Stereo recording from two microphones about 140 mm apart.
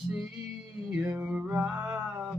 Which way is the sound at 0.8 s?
5° right (ahead or behind).